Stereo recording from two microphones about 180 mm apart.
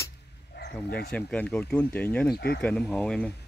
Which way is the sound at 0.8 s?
60° left (ahead or behind).